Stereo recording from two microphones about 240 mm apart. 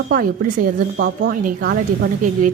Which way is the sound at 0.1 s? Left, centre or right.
Right.